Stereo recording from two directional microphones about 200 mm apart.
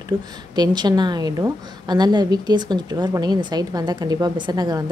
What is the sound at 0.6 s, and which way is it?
A woman's voice, 20° right (ahead or behind).